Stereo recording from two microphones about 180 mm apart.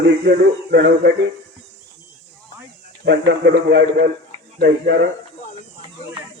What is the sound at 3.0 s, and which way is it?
Speech, 75° right (ahead or behind).